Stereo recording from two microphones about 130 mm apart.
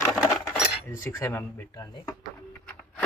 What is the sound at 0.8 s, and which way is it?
Speech, 20° left (ahead or behind).